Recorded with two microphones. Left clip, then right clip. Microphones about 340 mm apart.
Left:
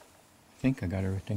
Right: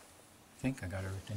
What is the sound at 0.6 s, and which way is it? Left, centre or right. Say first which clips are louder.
Speech: left 8 dB; centre.